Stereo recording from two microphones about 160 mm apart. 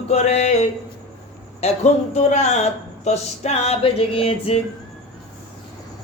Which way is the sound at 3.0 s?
40° left (ahead or behind).